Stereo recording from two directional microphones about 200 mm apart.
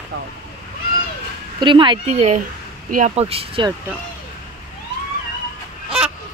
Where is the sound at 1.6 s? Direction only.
25° right (ahead or behind).